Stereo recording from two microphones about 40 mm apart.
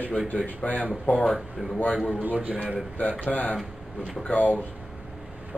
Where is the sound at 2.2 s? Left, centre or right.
Right.